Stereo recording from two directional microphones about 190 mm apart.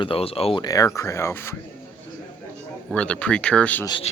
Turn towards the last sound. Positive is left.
turn(degrees=25)  # may be behind; listen again after turning